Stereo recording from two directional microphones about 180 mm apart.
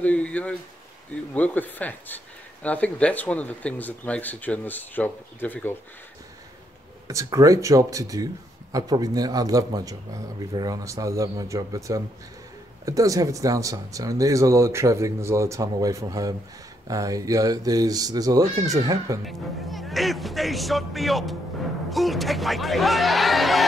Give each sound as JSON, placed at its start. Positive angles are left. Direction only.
{"t": 0.0, "sound": "speech", "side_deg": 5}
{"t": 7.1, "sound": "speech", "side_deg": -20}
{"t": 19.2, "sound": "speech", "side_deg": 0}